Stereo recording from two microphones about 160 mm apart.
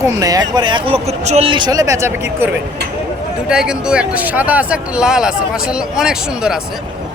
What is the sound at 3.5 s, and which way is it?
Speech, 5° right (ahead or behind).